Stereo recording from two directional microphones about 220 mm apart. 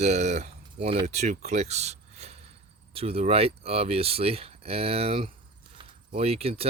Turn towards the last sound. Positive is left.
turn(degrees=-25)  # may be behind; listen again after turning